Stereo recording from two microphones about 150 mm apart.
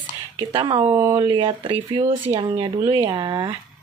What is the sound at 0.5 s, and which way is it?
Speech, 30° right (ahead or behind).